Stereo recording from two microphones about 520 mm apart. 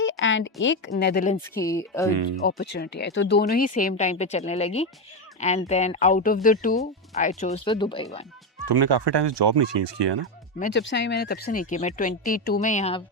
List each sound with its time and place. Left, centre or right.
0.0 s speech: left
1.5 s speech: centre
2.0 s speech: right
2.4 s speech: centre
8.6 s speech: right
10.6 s speech: centre